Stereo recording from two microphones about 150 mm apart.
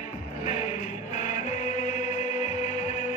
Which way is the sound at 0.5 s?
55° left (ahead or behind).